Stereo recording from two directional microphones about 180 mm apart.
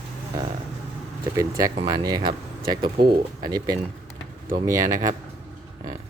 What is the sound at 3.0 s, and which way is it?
Speech, 65° right (ahead or behind).